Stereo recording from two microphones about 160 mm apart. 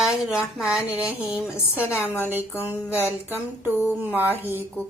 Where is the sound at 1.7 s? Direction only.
15° left (ahead or behind).